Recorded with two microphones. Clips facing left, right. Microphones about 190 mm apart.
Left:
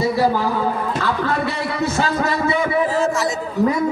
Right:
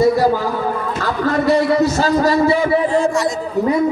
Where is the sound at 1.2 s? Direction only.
40° right (ahead or behind).